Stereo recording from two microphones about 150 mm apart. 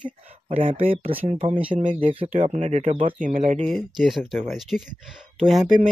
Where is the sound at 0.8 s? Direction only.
40° right (ahead or behind).